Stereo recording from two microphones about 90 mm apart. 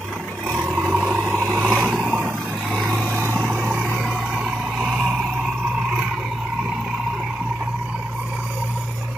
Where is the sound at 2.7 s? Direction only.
10° right (ahead or behind).